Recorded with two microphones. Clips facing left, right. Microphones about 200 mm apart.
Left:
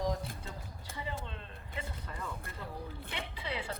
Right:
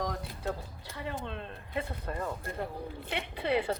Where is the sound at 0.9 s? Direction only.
60° right (ahead or behind).